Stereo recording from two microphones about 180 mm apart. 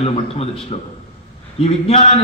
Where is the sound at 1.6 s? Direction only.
35° left (ahead or behind).